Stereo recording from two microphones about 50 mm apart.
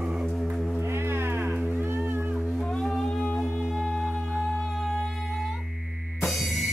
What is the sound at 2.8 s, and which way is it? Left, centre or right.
Music, centre.